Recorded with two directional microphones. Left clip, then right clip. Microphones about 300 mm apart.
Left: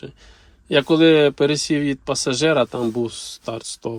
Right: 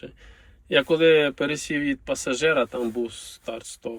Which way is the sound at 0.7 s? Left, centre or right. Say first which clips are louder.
Left 3 dB; centre.